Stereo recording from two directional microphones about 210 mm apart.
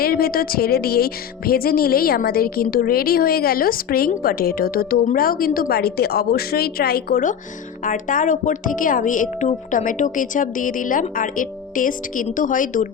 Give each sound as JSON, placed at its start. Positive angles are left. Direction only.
{"t": 0.0, "sound": "speech", "side_deg": 45}